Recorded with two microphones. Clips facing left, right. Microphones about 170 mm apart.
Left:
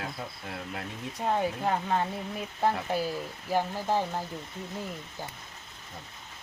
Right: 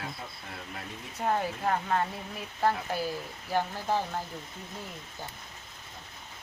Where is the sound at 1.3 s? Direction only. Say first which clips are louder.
Left 1 dB; 15° left (ahead or behind).